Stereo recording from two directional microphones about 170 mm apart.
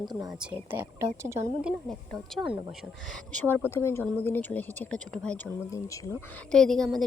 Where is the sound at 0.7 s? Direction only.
10° right (ahead or behind).